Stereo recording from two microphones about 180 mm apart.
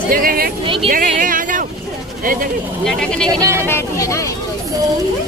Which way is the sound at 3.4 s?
15° right (ahead or behind).